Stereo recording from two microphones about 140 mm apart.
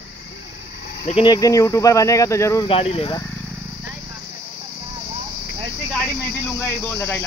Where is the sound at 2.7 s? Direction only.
45° left (ahead or behind).